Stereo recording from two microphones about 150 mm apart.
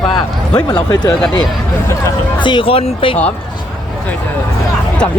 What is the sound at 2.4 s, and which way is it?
Speech, 35° left (ahead or behind).